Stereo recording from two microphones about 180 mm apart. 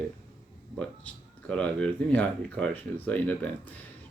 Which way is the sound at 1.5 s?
5° left (ahead or behind).